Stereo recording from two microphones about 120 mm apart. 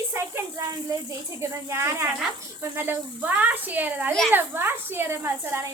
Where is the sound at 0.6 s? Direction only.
30° right (ahead or behind).